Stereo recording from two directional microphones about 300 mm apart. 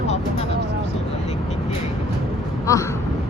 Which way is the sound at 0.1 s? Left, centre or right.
Left.